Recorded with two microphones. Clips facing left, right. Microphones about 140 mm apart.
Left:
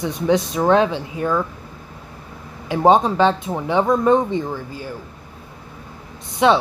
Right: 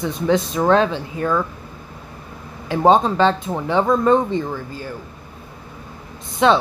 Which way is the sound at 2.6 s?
15° left (ahead or behind).